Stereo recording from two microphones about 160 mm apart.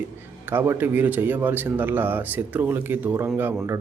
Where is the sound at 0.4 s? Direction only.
15° right (ahead or behind).